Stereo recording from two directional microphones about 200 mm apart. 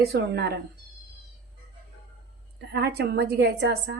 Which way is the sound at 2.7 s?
55° right (ahead or behind).